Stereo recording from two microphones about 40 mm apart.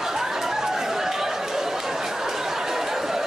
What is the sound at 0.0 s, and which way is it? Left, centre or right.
Chatter, centre.